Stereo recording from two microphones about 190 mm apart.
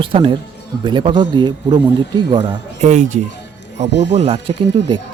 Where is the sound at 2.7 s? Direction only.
40° right (ahead or behind).